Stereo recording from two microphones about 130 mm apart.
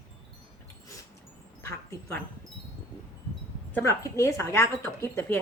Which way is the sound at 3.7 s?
20° left (ahead or behind).